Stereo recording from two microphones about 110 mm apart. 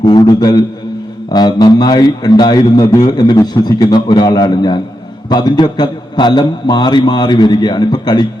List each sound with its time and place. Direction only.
0.0 s a man's voice: 40° left (ahead or behind)